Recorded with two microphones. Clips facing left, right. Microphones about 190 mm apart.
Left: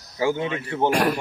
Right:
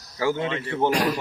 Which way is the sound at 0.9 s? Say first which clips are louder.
Left 2 dB; 55° left (ahead or behind).